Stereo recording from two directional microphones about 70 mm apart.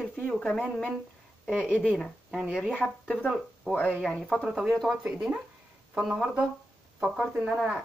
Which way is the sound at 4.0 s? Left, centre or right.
Centre.